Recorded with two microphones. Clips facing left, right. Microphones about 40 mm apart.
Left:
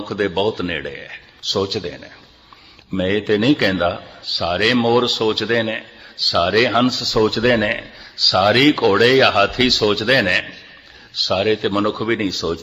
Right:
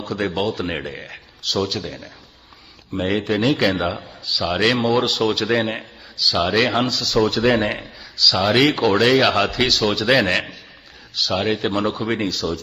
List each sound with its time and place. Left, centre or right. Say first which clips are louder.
0.0 s speech: left 3 dB; centre
7.6 s a man's voice: left 3 dB; left
8.4 s speech: left 3 dB; centre